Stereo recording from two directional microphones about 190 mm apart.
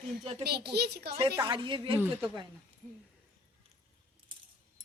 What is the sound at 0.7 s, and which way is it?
Speech, 60° right (ahead or behind).